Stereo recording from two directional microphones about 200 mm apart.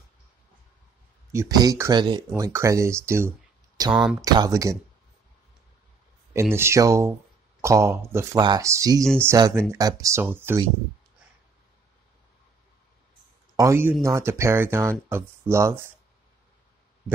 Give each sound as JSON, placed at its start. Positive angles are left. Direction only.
{"t": 1.3, "sound": "speech", "side_deg": -15}
{"t": 3.9, "sound": "speech", "side_deg": -5}
{"t": 4.2, "sound": "speech", "side_deg": -20}
{"t": 6.5, "sound": "speech", "side_deg": -15}
{"t": 13.6, "sound": "speech", "side_deg": -10}